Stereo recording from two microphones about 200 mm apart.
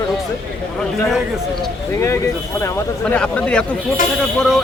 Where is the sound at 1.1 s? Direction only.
Centre (ahead or behind).